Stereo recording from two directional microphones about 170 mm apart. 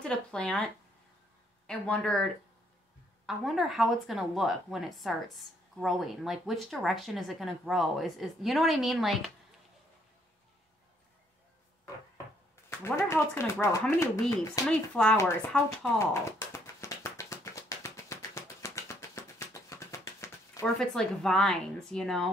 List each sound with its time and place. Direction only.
0.0 s a woman's voice: 5° left (ahead or behind)
1.7 s a woman's voice: 5° left (ahead or behind)
12.6 s speech: 15° left (ahead or behind)
14.7 s a woman's voice: 5° left (ahead or behind)
16.0 s tap: 15° left (ahead or behind)
20.7 s a woman's voice: 5° left (ahead or behind)